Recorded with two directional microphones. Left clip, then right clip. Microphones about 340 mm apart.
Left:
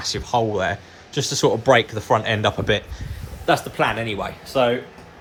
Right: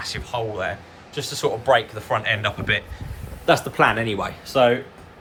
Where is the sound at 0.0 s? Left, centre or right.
Centre.